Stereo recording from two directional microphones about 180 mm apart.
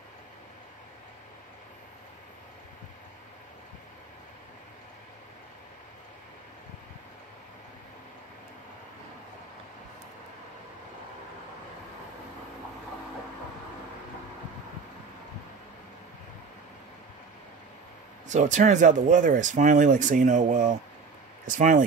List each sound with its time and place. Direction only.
18.3 s speech: 40° right (ahead or behind)